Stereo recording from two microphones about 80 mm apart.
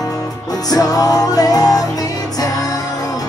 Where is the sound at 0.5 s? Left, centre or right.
Left.